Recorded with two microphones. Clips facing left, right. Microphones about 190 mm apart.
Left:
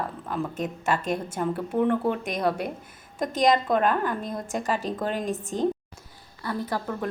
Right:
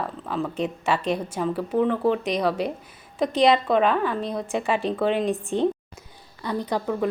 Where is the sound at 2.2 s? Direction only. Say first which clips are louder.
Right 3 dB; 50° left (ahead or behind).